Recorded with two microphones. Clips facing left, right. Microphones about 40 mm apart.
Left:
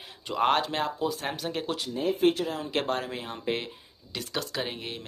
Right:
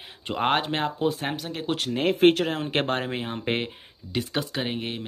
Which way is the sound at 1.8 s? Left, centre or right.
Right.